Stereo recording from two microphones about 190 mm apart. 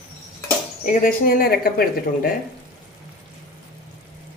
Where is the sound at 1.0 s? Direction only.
50° left (ahead or behind).